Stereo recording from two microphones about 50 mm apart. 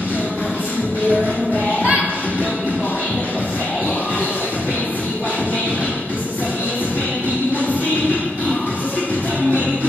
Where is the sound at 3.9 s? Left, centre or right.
Left.